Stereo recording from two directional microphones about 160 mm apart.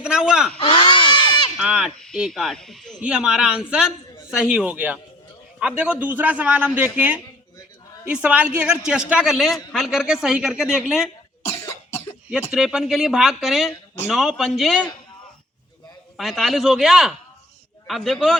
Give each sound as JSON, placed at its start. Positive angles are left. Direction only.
{"t": 0.0, "sound": "speech", "side_deg": -5}
{"t": 0.6, "sound": "a sound", "side_deg": 30}
{"t": 1.5, "sound": "a man's voice", "side_deg": -5}
{"t": 11.4, "sound": "cough", "side_deg": 15}
{"t": 12.5, "sound": "speech", "side_deg": -5}
{"t": 16.1, "sound": "speech", "side_deg": 0}